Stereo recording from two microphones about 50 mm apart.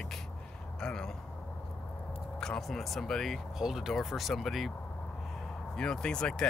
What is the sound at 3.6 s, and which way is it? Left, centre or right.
Speech, centre.